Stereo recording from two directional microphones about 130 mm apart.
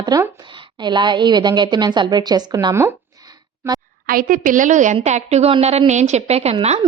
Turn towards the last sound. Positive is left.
turn(degrees=-40)  # may be behind; listen again after turning